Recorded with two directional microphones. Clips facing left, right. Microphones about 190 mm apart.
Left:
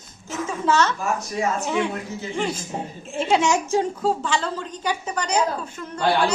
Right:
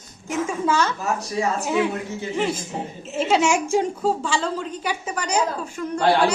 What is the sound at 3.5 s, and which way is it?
Speech, 10° right (ahead or behind).